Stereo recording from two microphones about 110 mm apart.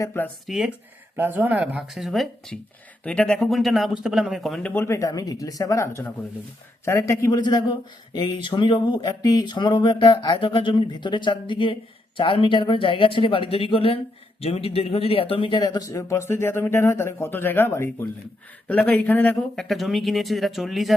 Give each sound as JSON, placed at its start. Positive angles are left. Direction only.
{"t": 0.0, "sound": "speech", "side_deg": 20}
{"t": 0.4, "sound": "a man's voice", "side_deg": -5}
{"t": 1.1, "sound": "speech", "side_deg": -15}
{"t": 1.9, "sound": "a man's voice", "side_deg": 0}
{"t": 4.7, "sound": "speech", "side_deg": 25}
{"t": 7.3, "sound": "a man's voice", "side_deg": 40}
{"t": 15.6, "sound": "speech", "side_deg": 35}
{"t": 19.6, "sound": "a man's voice", "side_deg": 0}